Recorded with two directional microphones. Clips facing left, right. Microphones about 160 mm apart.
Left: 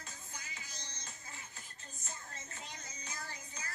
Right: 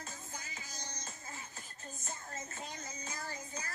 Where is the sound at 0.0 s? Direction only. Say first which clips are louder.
Right 4 dB; 40° right (ahead or behind).